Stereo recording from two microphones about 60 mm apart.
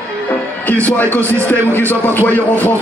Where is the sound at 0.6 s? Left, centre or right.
Left.